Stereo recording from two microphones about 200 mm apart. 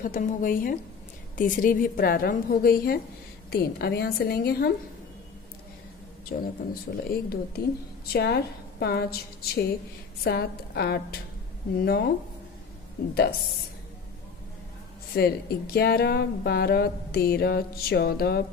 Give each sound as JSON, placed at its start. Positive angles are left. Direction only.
{"t": 0.0, "sound": "speech", "side_deg": 45}
{"t": 6.4, "sound": "speech", "side_deg": 50}
{"t": 15.1, "sound": "speech", "side_deg": 50}